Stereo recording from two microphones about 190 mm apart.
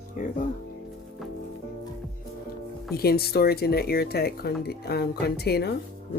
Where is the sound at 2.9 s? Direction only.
55° left (ahead or behind).